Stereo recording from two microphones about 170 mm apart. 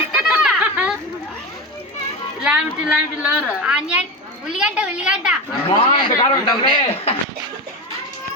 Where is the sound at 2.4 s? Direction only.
5° right (ahead or behind).